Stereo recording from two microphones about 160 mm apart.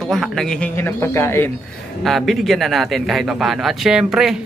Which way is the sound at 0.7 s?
15° left (ahead or behind).